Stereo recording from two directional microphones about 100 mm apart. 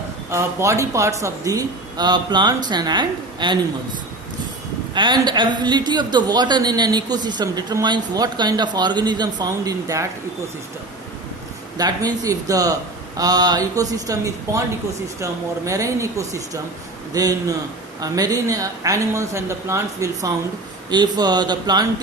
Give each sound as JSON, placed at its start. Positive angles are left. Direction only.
{"t": 0.3, "sound": "a woman's voice", "side_deg": -30}
{"t": 4.9, "sound": "a woman's voice", "side_deg": -50}
{"t": 11.8, "sound": "a woman's voice", "side_deg": -40}
{"t": 20.9, "sound": "a woman's voice", "side_deg": -45}